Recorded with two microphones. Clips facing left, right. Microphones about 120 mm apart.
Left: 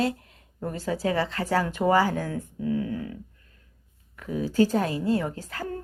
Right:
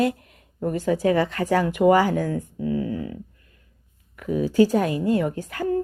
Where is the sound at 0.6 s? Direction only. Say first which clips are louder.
Right 6 dB; 15° right (ahead or behind).